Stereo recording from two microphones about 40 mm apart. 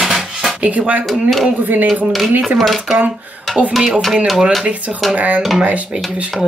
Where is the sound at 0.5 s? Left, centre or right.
Right.